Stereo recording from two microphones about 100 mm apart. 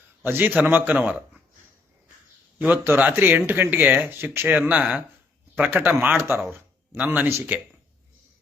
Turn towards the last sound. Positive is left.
turn(degrees=-20)  # may be behind; listen again after turning